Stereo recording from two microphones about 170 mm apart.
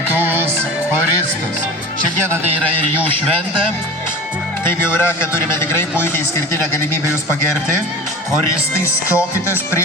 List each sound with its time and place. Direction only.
0.1 s music: 10° right (ahead or behind)
4.9 s a man's voice: 15° left (ahead or behind)
8.8 s a man's voice: 15° left (ahead or behind)